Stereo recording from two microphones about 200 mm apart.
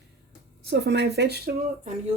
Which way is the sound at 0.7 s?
55° right (ahead or behind).